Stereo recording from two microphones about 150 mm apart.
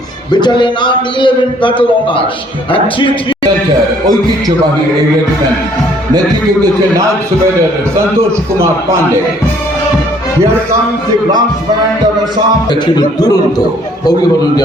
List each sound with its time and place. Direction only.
0.3 s a man's voice: 30° left (ahead or behind)
13.0 s a man's voice: 25° left (ahead or behind)